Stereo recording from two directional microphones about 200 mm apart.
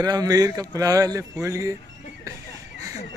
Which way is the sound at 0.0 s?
20° right (ahead or behind).